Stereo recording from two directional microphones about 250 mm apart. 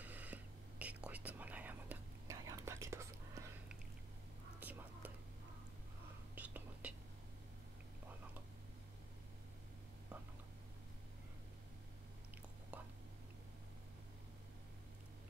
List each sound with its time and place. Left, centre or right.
0.0 s whispering: centre
6.3 s whispering: centre
12.7 s whispering: centre